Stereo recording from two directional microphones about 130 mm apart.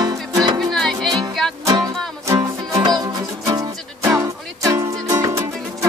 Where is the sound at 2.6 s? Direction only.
35° right (ahead or behind).